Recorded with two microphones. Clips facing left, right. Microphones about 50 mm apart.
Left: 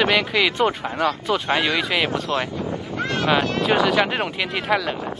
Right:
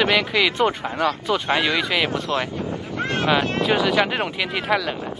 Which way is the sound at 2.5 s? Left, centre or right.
Right.